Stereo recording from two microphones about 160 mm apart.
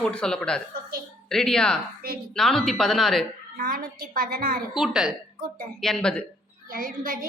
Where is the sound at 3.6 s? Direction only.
65° right (ahead or behind).